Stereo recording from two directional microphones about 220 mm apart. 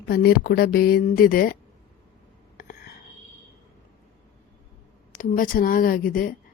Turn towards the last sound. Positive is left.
turn(degrees=40)  # may be behind; listen again after turning